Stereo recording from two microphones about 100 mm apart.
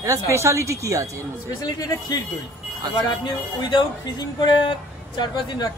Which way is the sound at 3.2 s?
50° left (ahead or behind).